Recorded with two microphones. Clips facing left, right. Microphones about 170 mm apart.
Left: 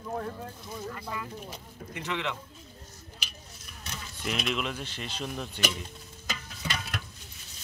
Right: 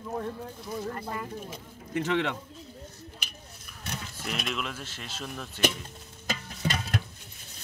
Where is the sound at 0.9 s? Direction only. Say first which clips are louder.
Right 2 dB; 50° right (ahead or behind).